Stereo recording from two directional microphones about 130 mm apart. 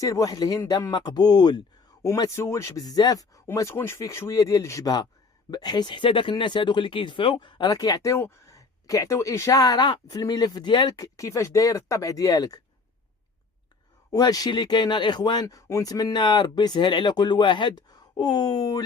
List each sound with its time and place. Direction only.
0.0 s speech: 25° left (ahead or behind)
14.1 s speech: 30° left (ahead or behind)